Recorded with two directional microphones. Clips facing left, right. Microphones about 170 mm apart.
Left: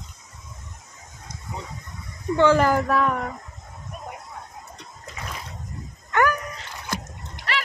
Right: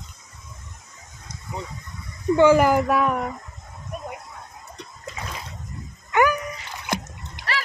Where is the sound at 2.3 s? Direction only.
10° right (ahead or behind).